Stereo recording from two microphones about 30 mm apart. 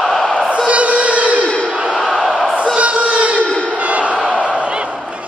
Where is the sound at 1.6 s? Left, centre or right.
Right.